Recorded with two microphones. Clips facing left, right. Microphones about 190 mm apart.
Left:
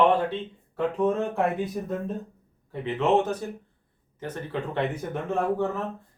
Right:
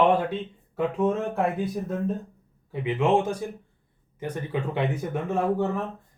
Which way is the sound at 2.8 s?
10° right (ahead or behind).